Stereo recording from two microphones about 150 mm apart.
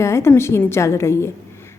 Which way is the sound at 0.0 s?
15° left (ahead or behind).